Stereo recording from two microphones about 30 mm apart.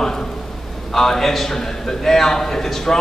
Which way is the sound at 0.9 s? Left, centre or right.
Centre.